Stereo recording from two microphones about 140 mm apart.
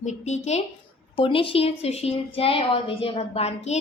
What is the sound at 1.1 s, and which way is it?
A woman's voice, 40° left (ahead or behind).